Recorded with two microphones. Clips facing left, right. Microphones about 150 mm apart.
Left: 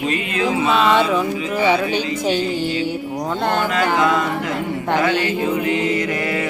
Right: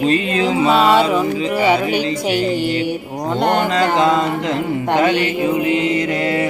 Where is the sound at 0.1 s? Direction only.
30° right (ahead or behind).